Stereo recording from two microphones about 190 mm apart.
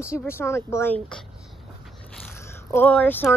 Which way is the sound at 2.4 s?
10° left (ahead or behind).